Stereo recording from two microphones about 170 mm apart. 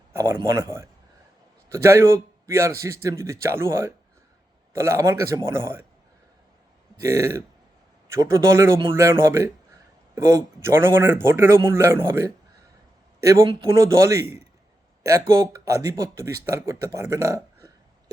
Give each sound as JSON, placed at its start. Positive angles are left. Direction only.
{"t": 0.1, "sound": "a sound", "side_deg": -15}
{"t": 0.4, "sound": "a man's voice", "side_deg": -15}
{"t": 7.0, "sound": "a man's voice", "side_deg": -20}
{"t": 13.7, "sound": "a man's voice", "side_deg": -15}